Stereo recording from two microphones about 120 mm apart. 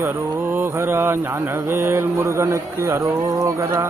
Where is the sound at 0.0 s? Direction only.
20° right (ahead or behind).